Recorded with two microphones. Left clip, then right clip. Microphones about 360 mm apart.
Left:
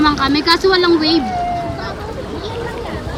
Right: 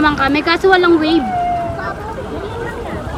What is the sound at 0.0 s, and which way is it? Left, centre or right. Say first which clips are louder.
Speech: even; centre.